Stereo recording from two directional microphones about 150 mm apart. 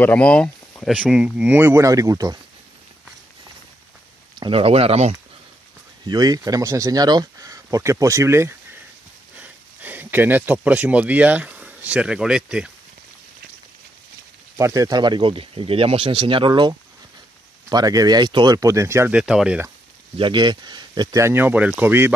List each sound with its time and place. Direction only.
0.0 s speech: 10° left (ahead or behind)
0.9 s speech: 5° right (ahead or behind); by 2.3 s 25° right (ahead or behind)
4.4 s speech: 40° right (ahead or behind)
6.0 s speech: 25° right (ahead or behind); by 12.7 s 5° right (ahead or behind)
14.6 s speech: 20° right (ahead or behind)
19.1 s speech: 5° right (ahead or behind)
20.2 s speech: 30° right (ahead or behind); by 22.1 s 15° right (ahead or behind)